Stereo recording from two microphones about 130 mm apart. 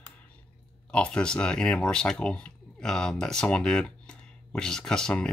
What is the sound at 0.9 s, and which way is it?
Speech, 10° left (ahead or behind).